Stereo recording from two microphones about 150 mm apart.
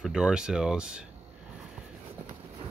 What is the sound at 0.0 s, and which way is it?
Speech, 5° right (ahead or behind).